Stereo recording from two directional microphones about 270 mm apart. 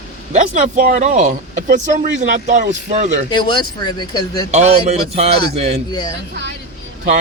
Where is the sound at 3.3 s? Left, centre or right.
Centre.